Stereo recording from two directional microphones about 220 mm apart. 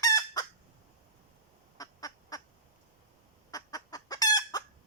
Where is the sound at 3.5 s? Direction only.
15° left (ahead or behind).